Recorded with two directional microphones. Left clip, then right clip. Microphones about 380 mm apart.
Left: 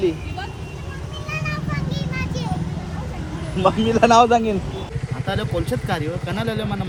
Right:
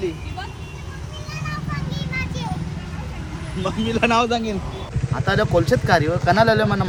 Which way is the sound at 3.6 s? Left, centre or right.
Centre.